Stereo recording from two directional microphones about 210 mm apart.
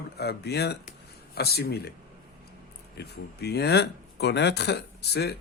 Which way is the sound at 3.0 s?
50° left (ahead or behind).